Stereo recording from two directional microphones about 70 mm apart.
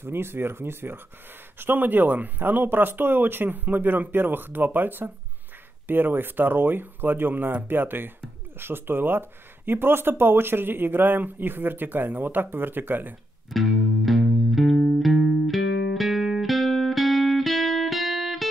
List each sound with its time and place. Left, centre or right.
0.0 s speech: right
13.5 s music: centre